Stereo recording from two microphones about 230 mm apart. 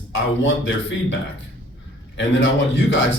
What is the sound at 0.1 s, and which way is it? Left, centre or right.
Speech, left.